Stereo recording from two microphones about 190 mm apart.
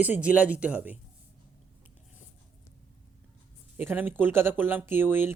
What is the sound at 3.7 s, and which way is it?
Speech, 10° right (ahead or behind).